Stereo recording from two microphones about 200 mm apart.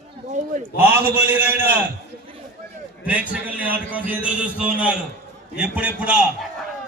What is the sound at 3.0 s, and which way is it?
A man's voice, 5° right (ahead or behind).